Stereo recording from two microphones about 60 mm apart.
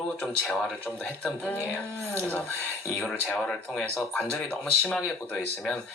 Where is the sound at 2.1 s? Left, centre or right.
Left.